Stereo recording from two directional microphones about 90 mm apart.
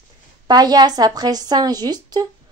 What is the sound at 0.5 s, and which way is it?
Speech, 50° right (ahead or behind).